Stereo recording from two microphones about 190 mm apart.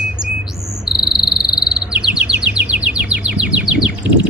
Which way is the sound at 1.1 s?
Centre (ahead or behind).